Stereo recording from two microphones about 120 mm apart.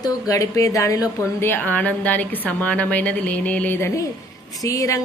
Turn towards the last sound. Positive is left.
turn(degrees=25)  # may be behind; listen again after turning